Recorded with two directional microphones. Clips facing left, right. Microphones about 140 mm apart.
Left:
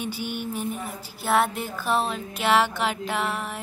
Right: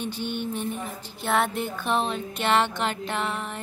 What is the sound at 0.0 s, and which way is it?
Speech, 10° left (ahead or behind).